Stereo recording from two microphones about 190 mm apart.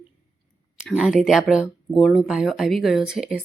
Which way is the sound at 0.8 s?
5° right (ahead or behind).